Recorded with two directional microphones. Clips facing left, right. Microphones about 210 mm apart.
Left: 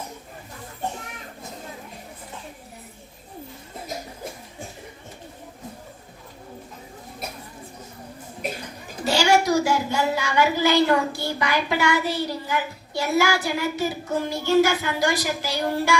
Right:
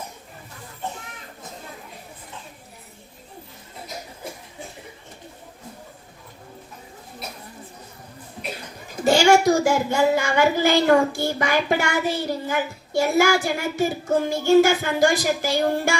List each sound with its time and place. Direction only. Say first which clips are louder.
9.0 s speech: right 4 dB; 50° right (ahead or behind)